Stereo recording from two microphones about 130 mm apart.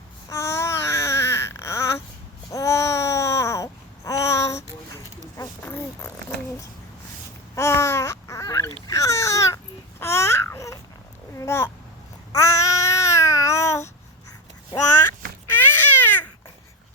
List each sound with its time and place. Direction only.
0.3 s babbling: 20° left (ahead or behind)
5.4 s a sound: 20° left (ahead or behind)
7.5 s babbling: 20° left (ahead or behind)
8.9 s baby cry: 25° left (ahead or behind)
10.0 s babbling: 20° left (ahead or behind)
15.4 s baby cry: 15° left (ahead or behind)